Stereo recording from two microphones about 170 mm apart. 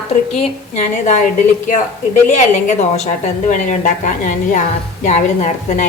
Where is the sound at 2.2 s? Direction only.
45° left (ahead or behind).